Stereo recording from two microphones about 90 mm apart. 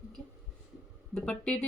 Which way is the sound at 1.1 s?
15° left (ahead or behind).